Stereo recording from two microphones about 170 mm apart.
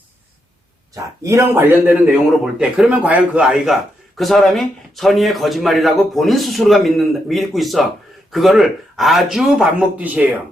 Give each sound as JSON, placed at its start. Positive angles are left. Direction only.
{"t": 0.9, "sound": "speech", "side_deg": -20}
{"t": 1.9, "sound": "a man's voice", "side_deg": -5}